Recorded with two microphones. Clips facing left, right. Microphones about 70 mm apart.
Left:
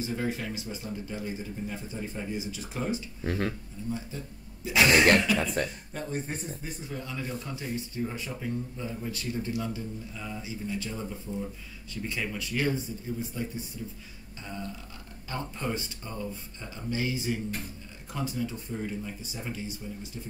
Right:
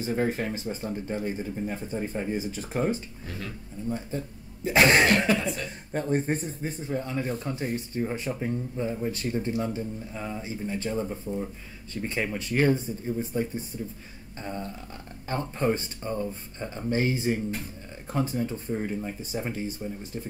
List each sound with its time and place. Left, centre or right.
0.0 s speech: right
3.3 s speech: left
3.8 s speech: right